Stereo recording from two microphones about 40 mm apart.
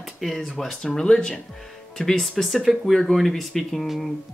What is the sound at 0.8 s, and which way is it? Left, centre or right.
Speech, left.